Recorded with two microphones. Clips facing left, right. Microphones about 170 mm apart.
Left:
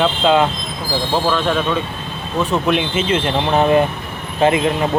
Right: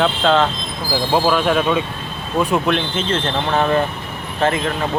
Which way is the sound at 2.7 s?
5° left (ahead or behind).